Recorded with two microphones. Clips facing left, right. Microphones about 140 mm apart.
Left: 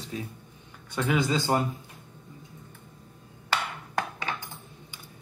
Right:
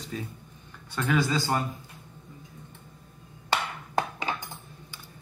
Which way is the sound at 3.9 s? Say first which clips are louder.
Right 3 dB; 25° right (ahead or behind).